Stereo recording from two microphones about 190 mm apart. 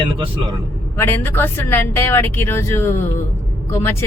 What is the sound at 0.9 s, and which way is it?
Speech, 10° left (ahead or behind).